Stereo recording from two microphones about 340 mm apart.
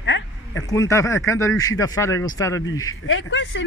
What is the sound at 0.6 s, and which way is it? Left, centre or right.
Speech, centre.